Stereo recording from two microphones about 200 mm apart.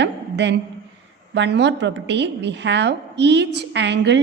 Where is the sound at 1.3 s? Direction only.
60° right (ahead or behind).